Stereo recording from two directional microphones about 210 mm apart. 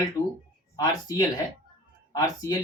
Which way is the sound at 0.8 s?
15° left (ahead or behind).